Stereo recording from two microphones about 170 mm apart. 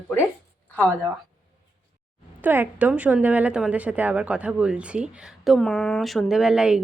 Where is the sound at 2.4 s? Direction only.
10° right (ahead or behind).